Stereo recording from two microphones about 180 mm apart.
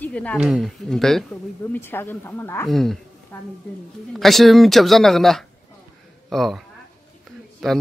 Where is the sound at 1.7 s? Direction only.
10° left (ahead or behind).